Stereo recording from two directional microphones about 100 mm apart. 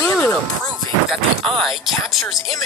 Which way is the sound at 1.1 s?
Centre (ahead or behind).